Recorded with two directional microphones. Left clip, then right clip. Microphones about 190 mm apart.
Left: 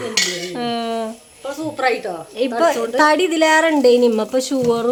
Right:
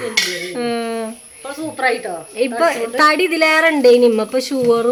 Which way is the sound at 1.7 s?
25° left (ahead or behind).